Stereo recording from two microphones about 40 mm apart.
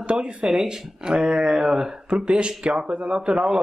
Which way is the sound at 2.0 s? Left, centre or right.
Right.